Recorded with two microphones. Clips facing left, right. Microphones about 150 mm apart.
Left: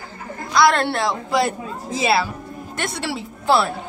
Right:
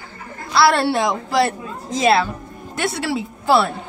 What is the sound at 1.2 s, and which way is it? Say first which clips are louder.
Speech: right 2 dB; centre (ahead or behind).